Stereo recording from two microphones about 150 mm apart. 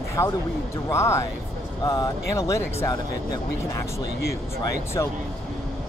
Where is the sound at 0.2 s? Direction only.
20° left (ahead or behind).